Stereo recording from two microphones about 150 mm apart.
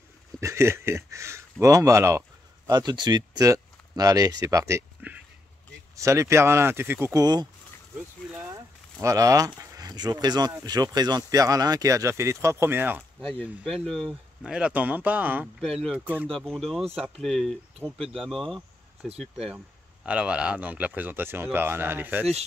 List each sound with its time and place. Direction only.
0.4 s speech: 20° right (ahead or behind)
13.2 s speech: 5° left (ahead or behind)
15.6 s speech: centre (ahead or behind)
16.0 s speech: 10° right (ahead or behind)
16.3 s speech: centre (ahead or behind); by 22.2 s 15° right (ahead or behind)